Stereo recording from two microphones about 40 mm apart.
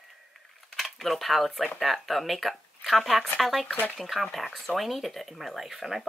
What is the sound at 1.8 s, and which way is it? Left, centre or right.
Speech, centre.